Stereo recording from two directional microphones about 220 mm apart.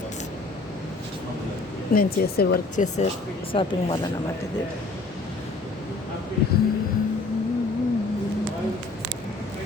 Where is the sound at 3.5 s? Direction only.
25° left (ahead or behind).